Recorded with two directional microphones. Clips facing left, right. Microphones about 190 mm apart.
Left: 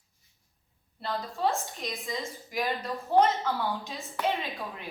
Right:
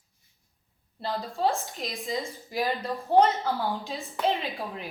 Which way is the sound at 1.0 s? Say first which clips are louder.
Right 2 dB; 30° right (ahead or behind).